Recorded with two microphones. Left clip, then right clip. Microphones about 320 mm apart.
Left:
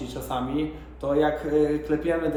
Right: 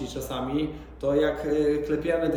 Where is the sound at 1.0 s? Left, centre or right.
Centre.